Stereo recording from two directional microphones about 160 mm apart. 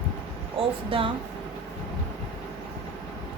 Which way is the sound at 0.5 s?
35° right (ahead or behind).